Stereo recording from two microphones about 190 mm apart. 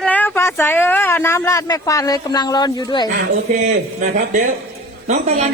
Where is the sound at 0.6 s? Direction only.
10° left (ahead or behind).